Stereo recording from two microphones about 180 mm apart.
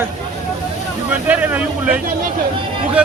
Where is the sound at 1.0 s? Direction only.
10° right (ahead or behind).